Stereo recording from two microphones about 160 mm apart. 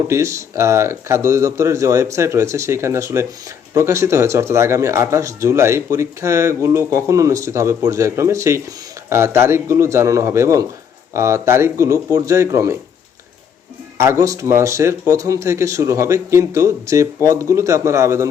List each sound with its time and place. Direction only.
0.1 s speech: 15° right (ahead or behind)
14.0 s speech: 15° right (ahead or behind)